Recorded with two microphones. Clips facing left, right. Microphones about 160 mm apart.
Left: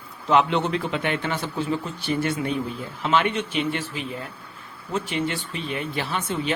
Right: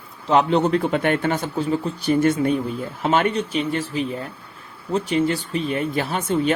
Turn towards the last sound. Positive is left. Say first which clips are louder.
# right 6 dB
turn(degrees=-45)  # may be behind; listen again after turning